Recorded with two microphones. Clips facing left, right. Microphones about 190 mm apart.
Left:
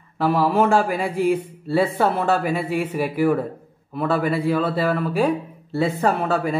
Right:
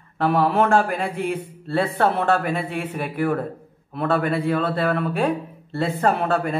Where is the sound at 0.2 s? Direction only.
5° left (ahead or behind).